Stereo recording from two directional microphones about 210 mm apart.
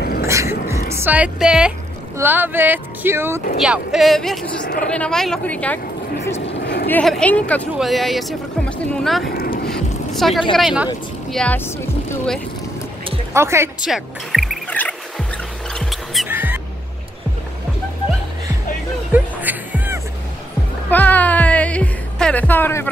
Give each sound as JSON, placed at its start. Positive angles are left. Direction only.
{"t": 0.0, "sound": "music", "side_deg": 45}
{"t": 0.3, "sound": "music", "side_deg": -15}
{"t": 0.9, "sound": "speech", "side_deg": -10}
{"t": 6.4, "sound": "a sound", "side_deg": 55}
{"t": 6.9, "sound": "speech", "side_deg": 5}
{"t": 9.3, "sound": "boat", "side_deg": 45}
{"t": 9.7, "sound": "vehicle", "side_deg": 0}
{"t": 10.5, "sound": "speech", "side_deg": 0}
{"t": 13.3, "sound": "speech", "side_deg": -10}
{"t": 13.8, "sound": "music", "side_deg": 0}
{"t": 19.1, "sound": "music", "side_deg": -10}
{"t": 20.9, "sound": "music", "side_deg": 10}